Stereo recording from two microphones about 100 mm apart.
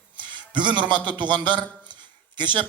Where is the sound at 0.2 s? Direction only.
50° right (ahead or behind).